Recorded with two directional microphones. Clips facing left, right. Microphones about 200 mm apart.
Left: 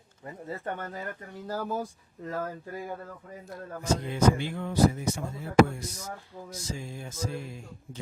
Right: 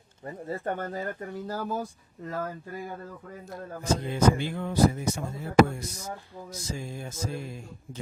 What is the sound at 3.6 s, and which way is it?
Speech, 30° right (ahead or behind).